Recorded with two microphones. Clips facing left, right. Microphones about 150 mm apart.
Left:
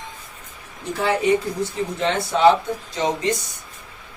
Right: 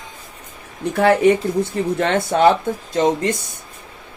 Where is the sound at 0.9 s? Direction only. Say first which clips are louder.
Right 5 dB; 55° right (ahead or behind).